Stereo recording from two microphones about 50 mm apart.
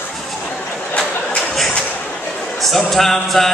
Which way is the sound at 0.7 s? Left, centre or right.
Left.